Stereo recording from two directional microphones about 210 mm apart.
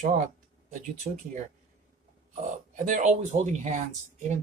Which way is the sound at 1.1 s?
35° right (ahead or behind).